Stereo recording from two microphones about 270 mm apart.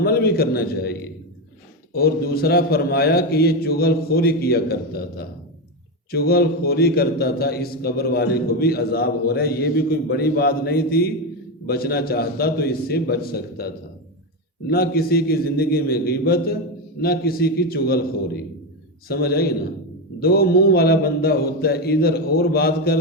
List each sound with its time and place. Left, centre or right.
0.0 s a man's voice: left
14.7 s a man's voice: left
19.0 s a man's voice: left